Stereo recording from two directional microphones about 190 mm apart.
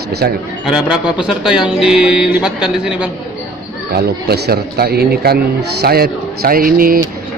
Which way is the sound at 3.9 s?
60° right (ahead or behind).